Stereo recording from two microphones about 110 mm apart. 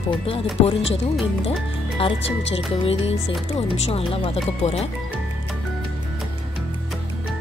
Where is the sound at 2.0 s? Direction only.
60° left (ahead or behind).